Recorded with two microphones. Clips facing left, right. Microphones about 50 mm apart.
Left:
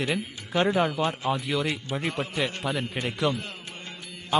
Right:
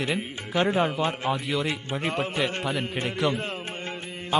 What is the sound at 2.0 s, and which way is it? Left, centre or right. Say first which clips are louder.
Speech: right 3 dB; right.